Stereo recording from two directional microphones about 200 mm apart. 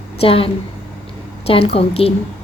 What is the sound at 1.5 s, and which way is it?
Speech, 30° left (ahead or behind).